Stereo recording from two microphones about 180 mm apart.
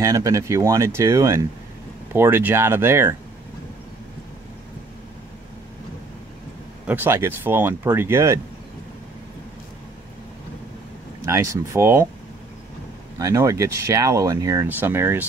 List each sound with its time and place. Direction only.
0.0 s speech: 15° right (ahead or behind)
6.9 s speech: 10° right (ahead or behind)
11.2 s speech: 15° right (ahead or behind)
13.2 s speech: 15° right (ahead or behind)